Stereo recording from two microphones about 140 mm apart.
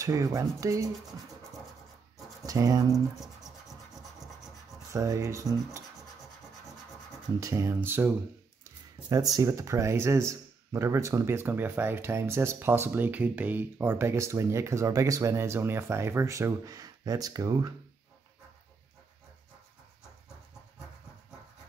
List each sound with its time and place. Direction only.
0.0 s speech: 25° right (ahead or behind)
2.4 s speech: 25° right (ahead or behind)
3.2 s scratch: centre (ahead or behind)
4.9 s speech: 25° right (ahead or behind)
7.3 s speech: 20° right (ahead or behind)
9.1 s speech: 25° right (ahead or behind)